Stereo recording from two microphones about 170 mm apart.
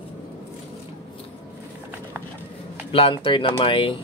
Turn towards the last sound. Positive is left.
turn(degrees=30)  # may be behind; listen again after turning